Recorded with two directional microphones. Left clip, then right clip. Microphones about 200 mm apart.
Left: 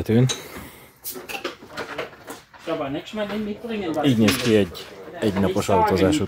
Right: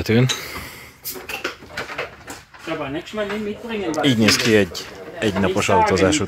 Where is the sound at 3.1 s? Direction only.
35° left (ahead or behind).